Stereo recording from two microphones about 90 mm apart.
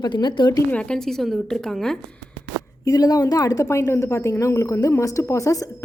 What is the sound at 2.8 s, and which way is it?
A woman's voice, 45° left (ahead or behind).